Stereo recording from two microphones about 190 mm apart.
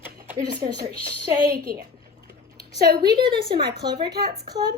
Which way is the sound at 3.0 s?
25° right (ahead or behind).